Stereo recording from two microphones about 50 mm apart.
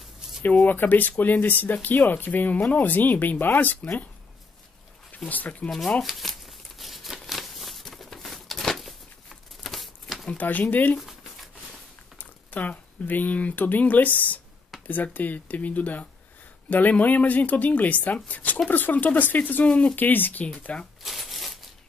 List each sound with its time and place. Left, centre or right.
0.7 s speech: left
5.3 s speech: left
6.0 s a sound: centre
10.3 s speech: left
11.0 s a sound: centre
12.2 s speech: left
21.0 s shuffling cards: centre